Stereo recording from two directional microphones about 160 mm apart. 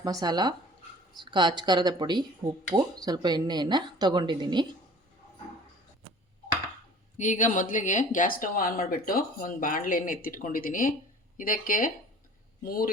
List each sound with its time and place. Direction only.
0.0 s a woman's voice: 25° right (ahead or behind)
7.2 s speech: 50° left (ahead or behind)